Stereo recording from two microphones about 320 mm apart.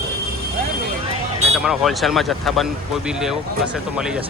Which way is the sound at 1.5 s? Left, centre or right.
Centre.